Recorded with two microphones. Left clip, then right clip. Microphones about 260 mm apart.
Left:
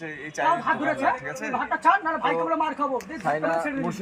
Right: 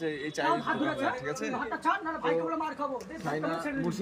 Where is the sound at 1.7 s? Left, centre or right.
Left.